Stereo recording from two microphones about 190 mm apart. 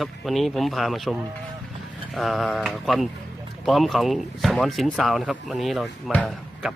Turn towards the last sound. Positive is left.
turn(degrees=0)  # may be behind; listen again after turning